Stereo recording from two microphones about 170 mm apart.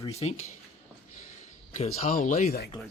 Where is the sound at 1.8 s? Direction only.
50° left (ahead or behind).